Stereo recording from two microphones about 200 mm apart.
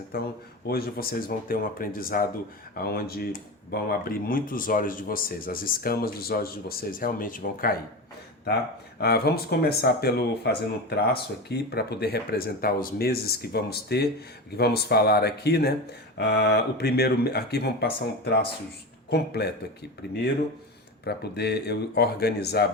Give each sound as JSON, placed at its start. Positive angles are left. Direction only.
{"t": 0.1, "sound": "speech", "side_deg": 50}
{"t": 9.0, "sound": "speech", "side_deg": 50}
{"t": 21.0, "sound": "speech", "side_deg": 55}